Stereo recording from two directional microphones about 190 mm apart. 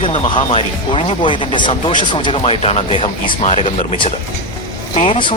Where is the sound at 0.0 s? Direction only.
25° left (ahead or behind).